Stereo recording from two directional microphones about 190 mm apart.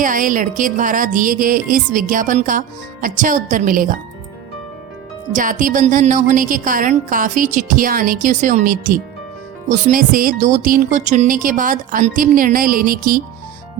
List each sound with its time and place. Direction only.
0.0 s a woman's voice: 45° right (ahead or behind)
5.3 s a woman's voice: 45° right (ahead or behind)